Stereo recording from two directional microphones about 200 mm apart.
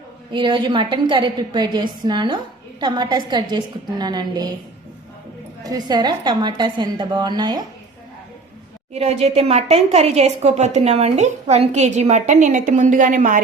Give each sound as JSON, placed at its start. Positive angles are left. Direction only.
{"t": 0.3, "sound": "a woman's voice", "side_deg": -25}
{"t": 5.6, "sound": "a woman's voice", "side_deg": -20}
{"t": 8.9, "sound": "a woman's voice", "side_deg": -30}